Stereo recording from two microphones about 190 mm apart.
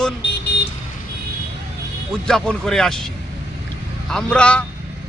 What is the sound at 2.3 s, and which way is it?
Speech, 5° left (ahead or behind).